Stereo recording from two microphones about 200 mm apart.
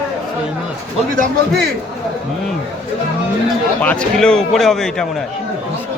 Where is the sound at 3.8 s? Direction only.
5° left (ahead or behind).